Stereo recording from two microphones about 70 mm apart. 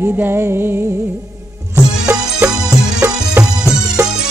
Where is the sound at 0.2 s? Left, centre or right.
Right.